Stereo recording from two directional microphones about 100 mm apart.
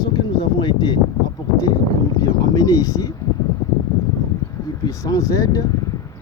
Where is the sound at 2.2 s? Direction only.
40° left (ahead or behind).